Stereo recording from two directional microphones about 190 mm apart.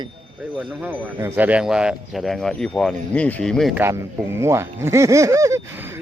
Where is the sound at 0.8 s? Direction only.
10° right (ahead or behind).